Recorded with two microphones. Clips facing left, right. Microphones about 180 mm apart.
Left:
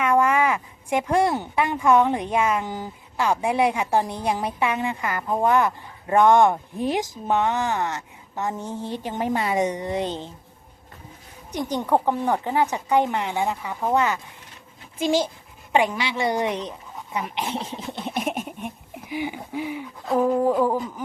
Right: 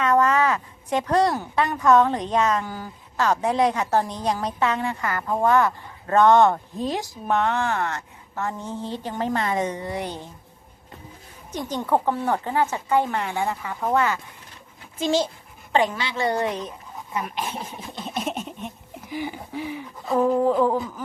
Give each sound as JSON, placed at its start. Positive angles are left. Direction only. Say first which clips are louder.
{"t": 0.0, "sound": "a woman's voice", "louder": "even", "side_deg": 10}
{"t": 11.5, "sound": "a woman's voice", "louder": "left 1 dB", "side_deg": 15}
{"t": 18.0, "sound": "a sound", "louder": "left 1 dB", "side_deg": 15}
{"t": 19.1, "sound": "a woman's voice", "louder": "left 2 dB", "side_deg": 15}